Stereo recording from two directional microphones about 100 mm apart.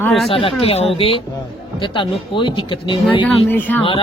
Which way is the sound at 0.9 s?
70° left (ahead or behind).